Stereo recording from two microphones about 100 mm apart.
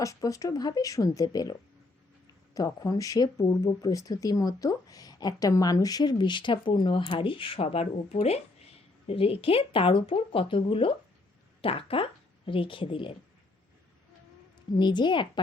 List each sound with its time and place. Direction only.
0.0 s speech: 35° left (ahead or behind)
2.6 s speech: 35° left (ahead or behind); by 8.4 s 90° left
9.0 s speech: 75° left (ahead or behind)
14.8 s a woman's voice: 50° left (ahead or behind)